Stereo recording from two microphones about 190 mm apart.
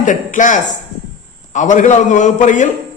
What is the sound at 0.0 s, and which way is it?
A man's voice, 40° left (ahead or behind).